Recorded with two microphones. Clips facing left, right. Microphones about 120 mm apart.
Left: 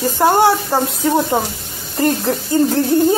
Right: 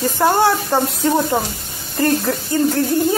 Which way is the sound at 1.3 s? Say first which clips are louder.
Left 2 dB; 20° left (ahead or behind).